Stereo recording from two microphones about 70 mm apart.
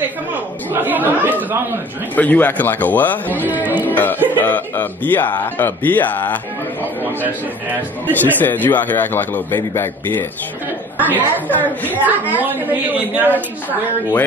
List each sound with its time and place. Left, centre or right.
0.3 s chatter: right
2.1 s speech: left
3.4 s music: right
3.9 s music: left
4.4 s speech: left
8.4 s a man's voice: left
11.1 s a woman's voice: right
11.4 s speech: left
11.9 s a woman's voice: right
13.3 s speech: left